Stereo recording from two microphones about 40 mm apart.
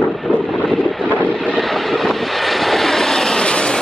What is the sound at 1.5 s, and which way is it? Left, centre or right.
Vehicle, centre.